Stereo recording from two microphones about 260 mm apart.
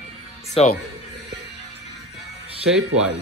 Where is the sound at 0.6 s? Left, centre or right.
Left.